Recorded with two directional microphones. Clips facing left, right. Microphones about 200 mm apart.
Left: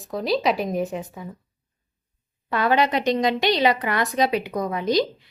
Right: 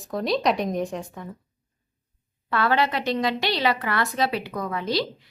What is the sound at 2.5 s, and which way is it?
A woman's voice, 15° left (ahead or behind).